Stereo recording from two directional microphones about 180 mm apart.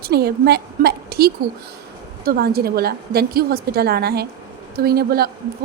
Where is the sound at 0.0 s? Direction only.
60° right (ahead or behind).